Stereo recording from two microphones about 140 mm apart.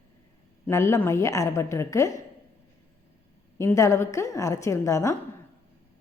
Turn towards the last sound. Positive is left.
turn(degrees=20)  # may be behind; listen again after turning